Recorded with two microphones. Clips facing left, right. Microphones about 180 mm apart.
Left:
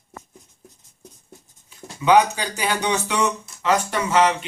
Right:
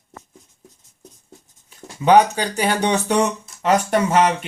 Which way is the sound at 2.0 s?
40° right (ahead or behind).